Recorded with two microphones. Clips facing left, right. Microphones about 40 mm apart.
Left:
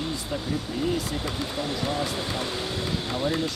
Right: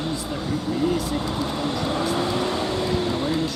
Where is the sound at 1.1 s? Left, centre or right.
Right.